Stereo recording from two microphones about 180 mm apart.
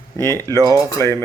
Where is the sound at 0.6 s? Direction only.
20° right (ahead or behind).